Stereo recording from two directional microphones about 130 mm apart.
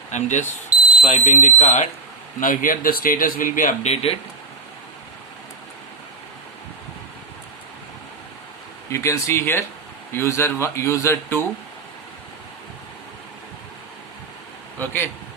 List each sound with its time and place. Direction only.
0.1 s speech: 65° left (ahead or behind)
2.4 s speech: 90° left
3.8 s speech: 50° left (ahead or behind)
8.9 s speech: 20° left (ahead or behind)
14.8 s speech: 15° left (ahead or behind)